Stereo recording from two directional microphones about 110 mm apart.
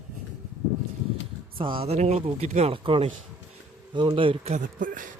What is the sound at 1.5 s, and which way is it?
Speech, 50° right (ahead or behind).